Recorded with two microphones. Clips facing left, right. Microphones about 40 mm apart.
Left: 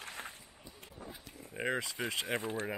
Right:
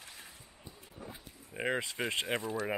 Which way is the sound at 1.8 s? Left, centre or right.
Right.